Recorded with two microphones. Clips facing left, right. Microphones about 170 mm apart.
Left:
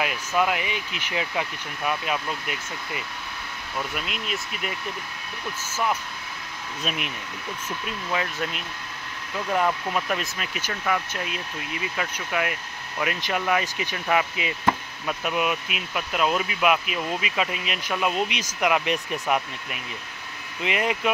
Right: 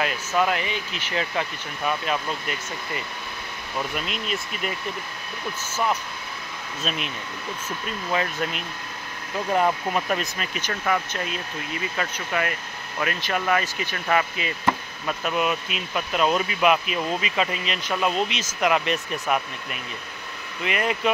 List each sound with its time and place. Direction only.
0.4 s speech: 10° left (ahead or behind)
3.9 s speech: 5° left (ahead or behind)
6.8 s speech: 15° left (ahead or behind)
8.1 s speech: centre (ahead or behind)
9.5 s speech: 30° right (ahead or behind)
9.9 s speech: centre (ahead or behind)
12.0 s speech: 10° left (ahead or behind)